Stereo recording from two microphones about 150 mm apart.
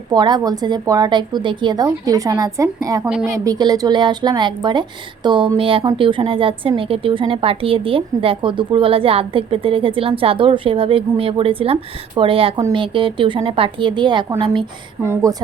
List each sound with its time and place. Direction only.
0.1 s a woman's voice: 30° right (ahead or behind)
15.0 s a woman's voice: 20° right (ahead or behind)